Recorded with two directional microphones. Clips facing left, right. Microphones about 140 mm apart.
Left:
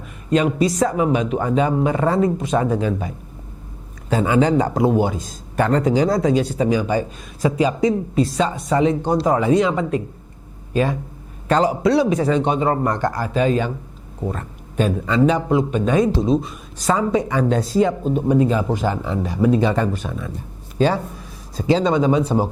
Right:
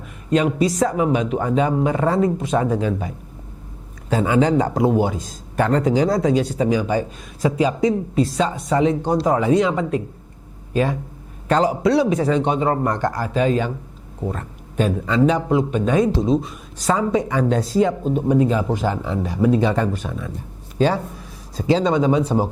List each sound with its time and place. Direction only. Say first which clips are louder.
0.3 s speech: even; 10° left (ahead or behind)
4.1 s speech: even; 10° left (ahead or behind)
11.4 s speech: even; 10° left (ahead or behind)
14.8 s speech: even; 15° left (ahead or behind)
21.7 s speech: even; 10° left (ahead or behind)